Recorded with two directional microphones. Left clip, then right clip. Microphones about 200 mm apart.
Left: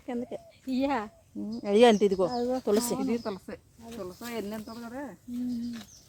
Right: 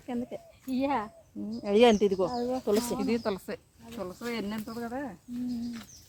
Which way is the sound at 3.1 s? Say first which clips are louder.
Right 2 dB; 50° right (ahead or behind).